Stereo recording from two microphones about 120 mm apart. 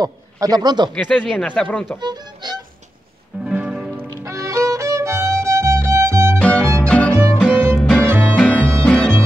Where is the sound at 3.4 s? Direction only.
10° right (ahead or behind).